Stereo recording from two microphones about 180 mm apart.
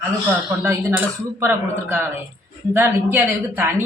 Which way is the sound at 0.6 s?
10° right (ahead or behind).